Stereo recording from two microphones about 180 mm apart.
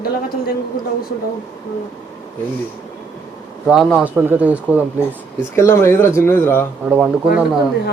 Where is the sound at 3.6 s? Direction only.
Centre (ahead or behind).